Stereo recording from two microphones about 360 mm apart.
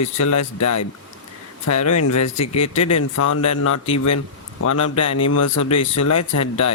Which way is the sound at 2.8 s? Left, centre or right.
Left.